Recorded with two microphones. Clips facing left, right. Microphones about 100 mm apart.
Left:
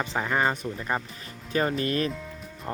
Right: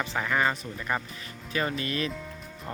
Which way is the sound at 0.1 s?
30° left (ahead or behind).